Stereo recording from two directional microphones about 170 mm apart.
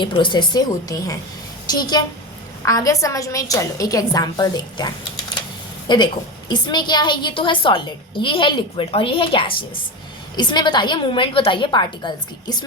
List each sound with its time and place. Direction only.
0.0 s a woman's voice: 30° left (ahead or behind)
5.9 s a woman's voice: 25° left (ahead or behind)